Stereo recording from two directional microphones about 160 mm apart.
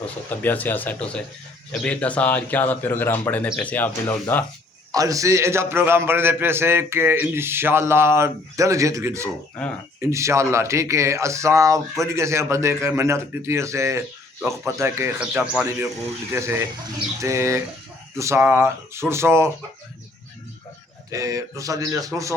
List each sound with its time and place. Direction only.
0.0 s speech: 10° left (ahead or behind)
4.9 s a man's voice: 20° right (ahead or behind)
21.1 s speech: 20° right (ahead or behind)